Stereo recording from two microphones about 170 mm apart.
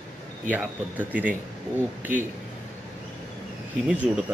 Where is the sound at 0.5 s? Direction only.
10° right (ahead or behind).